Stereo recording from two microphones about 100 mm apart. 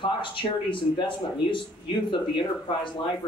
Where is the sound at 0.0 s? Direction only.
55° left (ahead or behind).